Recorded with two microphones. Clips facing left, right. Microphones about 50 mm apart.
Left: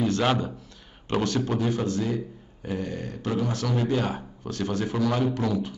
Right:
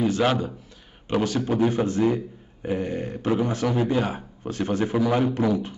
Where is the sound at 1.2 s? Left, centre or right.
Centre.